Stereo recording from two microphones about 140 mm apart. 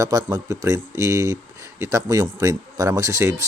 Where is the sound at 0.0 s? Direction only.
25° right (ahead or behind).